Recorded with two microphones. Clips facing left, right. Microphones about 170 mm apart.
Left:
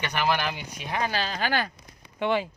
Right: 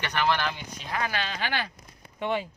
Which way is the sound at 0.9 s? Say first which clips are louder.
Left 2 dB; 30° left (ahead or behind).